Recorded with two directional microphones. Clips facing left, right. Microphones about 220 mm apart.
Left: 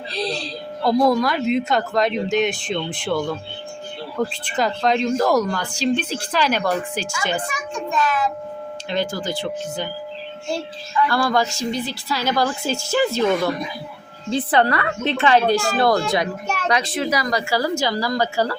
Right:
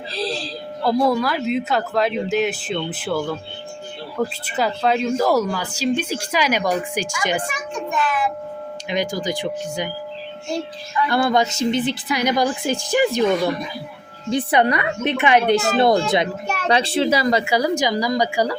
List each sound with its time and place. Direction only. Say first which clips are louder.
0.1 s speech: even; centre (ahead or behind)
11.0 s a woman's voice: right 2 dB; 20° right (ahead or behind)
14.3 s a woman's voice: right 1 dB; 15° right (ahead or behind)